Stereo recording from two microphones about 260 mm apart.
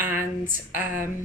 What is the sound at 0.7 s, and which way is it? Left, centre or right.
Speech, left.